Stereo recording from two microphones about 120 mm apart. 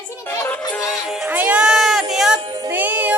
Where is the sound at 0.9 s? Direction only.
Centre (ahead or behind).